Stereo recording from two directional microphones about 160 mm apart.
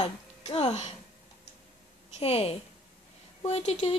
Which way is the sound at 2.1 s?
40° left (ahead or behind).